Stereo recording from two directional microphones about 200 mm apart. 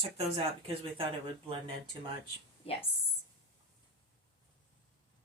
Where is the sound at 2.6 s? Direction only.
30° left (ahead or behind).